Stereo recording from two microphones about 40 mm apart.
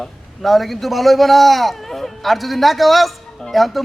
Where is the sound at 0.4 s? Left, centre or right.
Centre.